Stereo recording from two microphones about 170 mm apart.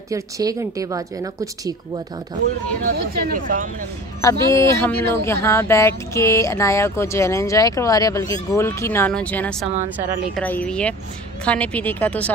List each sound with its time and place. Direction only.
0.1 s a woman's voice: 20° right (ahead or behind)
2.8 s speech: 55° right (ahead or behind)
4.2 s speech: 20° left (ahead or behind)
9.9 s speech: 10° right (ahead or behind)
10.3 s speech: 10° left (ahead or behind)